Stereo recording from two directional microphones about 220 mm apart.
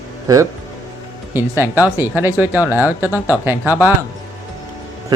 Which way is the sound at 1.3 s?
10° right (ahead or behind).